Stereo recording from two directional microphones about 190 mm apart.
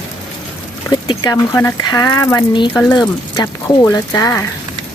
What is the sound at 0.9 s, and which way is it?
Speech, 20° left (ahead or behind).